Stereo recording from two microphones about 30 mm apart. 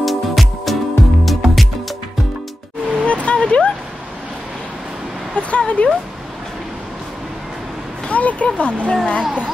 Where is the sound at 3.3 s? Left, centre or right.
Left.